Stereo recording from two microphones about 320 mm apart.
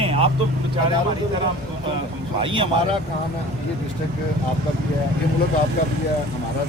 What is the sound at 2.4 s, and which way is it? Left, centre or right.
Speech, centre.